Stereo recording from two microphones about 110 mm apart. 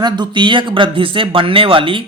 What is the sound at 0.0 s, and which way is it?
Speech, 45° right (ahead or behind).